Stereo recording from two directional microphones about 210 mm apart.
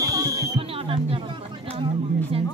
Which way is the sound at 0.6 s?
25° right (ahead or behind).